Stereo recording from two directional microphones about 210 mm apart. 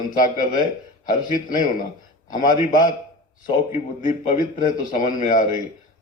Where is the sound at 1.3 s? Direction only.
40° left (ahead or behind).